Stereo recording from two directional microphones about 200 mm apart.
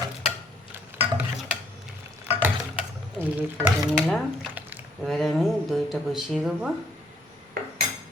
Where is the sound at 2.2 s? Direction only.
10° right (ahead or behind).